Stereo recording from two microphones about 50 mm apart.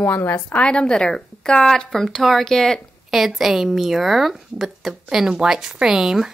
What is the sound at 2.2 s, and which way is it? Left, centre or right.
Speech, centre.